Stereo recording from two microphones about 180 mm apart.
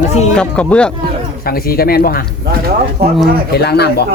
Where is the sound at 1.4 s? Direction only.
55° left (ahead or behind).